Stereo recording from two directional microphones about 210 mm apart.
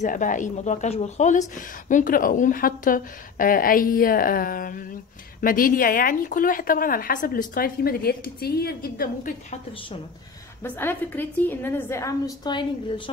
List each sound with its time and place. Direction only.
0.0 s a woman's voice: 40° left (ahead or behind)
10.6 s a woman's voice: 10° left (ahead or behind)